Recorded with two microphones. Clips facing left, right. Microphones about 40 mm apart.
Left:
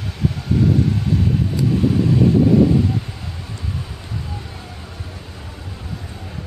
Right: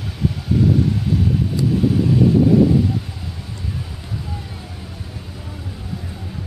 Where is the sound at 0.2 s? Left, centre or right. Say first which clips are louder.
Even; centre.